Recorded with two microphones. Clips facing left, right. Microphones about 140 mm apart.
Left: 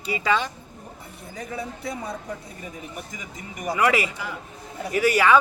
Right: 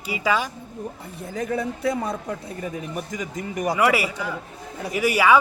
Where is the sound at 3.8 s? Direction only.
10° right (ahead or behind).